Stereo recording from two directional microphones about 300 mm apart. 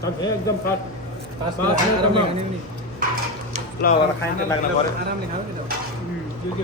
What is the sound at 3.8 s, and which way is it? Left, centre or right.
Speech, left.